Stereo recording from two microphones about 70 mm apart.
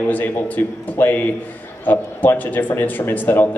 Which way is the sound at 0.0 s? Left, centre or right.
Left.